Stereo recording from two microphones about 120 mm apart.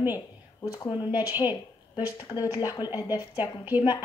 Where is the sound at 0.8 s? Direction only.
35° left (ahead or behind).